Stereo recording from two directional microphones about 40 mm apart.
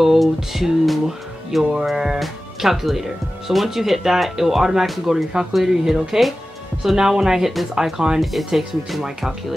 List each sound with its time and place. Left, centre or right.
0.0 s music: centre
1.6 s speech: centre
1.9 s speech: centre
8.2 s speech: centre